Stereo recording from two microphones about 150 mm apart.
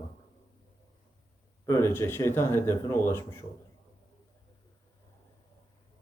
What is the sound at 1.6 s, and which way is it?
Speech, 20° left (ahead or behind).